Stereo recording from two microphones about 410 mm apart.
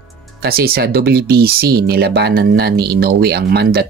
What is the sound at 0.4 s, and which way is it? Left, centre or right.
Speech, right.